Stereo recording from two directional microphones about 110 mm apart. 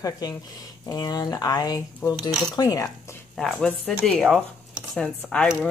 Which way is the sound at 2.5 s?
35° left (ahead or behind).